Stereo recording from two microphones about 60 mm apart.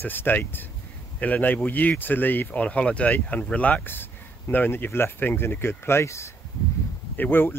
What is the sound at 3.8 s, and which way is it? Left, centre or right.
Speech, left.